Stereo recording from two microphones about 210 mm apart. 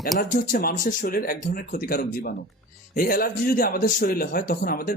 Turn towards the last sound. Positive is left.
turn(degrees=45)  # may be behind; listen again after turning